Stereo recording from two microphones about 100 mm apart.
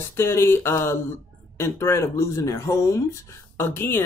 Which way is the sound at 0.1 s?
25° left (ahead or behind).